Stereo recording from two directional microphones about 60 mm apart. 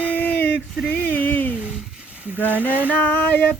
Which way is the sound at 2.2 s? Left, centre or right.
Right.